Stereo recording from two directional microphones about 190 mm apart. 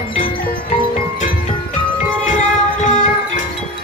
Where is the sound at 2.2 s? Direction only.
40° left (ahead or behind).